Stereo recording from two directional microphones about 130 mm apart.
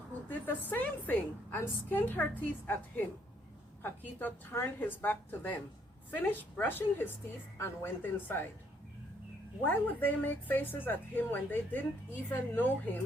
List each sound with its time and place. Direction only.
0.3 s a woman's voice: 15° left (ahead or behind)
9.6 s a woman's voice: 15° left (ahead or behind)